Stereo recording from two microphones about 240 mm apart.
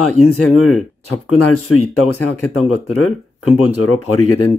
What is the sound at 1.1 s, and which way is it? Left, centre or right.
Speech, left.